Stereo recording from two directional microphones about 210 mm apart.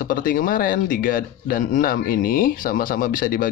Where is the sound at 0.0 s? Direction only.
40° left (ahead or behind).